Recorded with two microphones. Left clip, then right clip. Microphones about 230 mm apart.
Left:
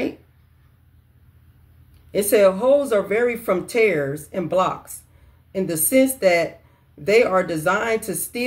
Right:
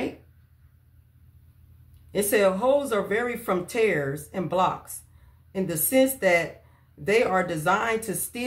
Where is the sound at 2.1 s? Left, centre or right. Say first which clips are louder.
Left 6 dB; centre.